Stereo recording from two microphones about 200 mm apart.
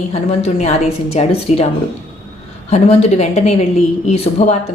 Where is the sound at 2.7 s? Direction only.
30° left (ahead or behind).